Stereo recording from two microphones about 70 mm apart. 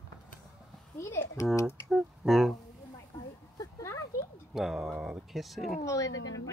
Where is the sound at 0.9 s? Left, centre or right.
Left.